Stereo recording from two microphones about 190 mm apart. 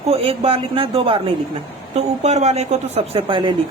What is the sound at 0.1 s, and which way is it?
A man's voice, 30° right (ahead or behind).